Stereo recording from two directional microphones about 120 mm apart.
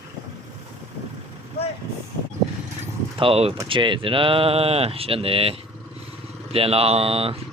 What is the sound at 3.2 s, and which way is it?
Speech, 55° right (ahead or behind).